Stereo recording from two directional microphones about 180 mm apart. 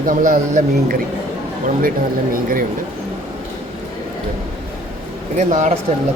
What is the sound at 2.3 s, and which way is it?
Speech, 50° right (ahead or behind).